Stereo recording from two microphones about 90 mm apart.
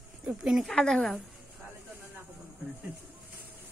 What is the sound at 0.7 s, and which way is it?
Speech, 5° left (ahead or behind).